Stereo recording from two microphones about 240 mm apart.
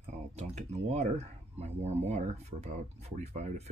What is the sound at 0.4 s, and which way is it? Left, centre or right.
Speech, right.